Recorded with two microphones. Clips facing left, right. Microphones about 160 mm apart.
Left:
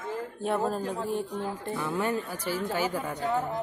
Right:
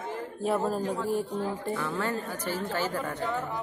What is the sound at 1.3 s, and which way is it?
Speech, 40° right (ahead or behind).